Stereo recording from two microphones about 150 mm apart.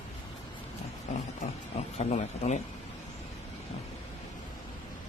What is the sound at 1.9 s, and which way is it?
Speech, 50° left (ahead or behind).